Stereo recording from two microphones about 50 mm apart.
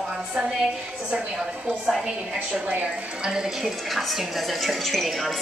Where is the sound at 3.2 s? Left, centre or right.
Centre.